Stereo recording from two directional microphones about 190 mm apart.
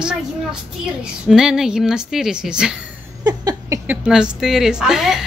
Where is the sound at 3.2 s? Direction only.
20° right (ahead or behind).